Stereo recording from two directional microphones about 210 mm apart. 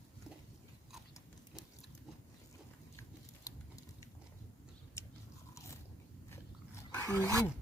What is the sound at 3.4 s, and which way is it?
Patter, 15° left (ahead or behind).